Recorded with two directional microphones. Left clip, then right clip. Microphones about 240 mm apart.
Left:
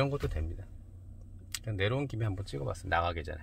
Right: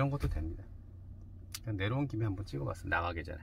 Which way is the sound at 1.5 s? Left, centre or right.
Left.